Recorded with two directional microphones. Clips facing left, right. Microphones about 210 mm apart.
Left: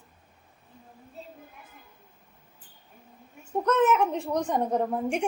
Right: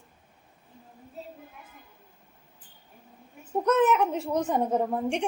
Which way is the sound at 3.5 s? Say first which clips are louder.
Even; 10° right (ahead or behind).